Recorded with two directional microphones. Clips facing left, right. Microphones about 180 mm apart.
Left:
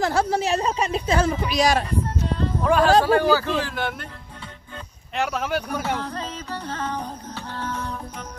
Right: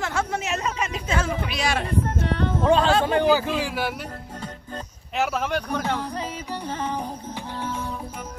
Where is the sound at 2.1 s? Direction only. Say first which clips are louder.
Right 1 dB; 65° right (ahead or behind).